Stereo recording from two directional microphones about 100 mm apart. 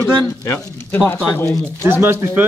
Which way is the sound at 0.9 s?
20° left (ahead or behind).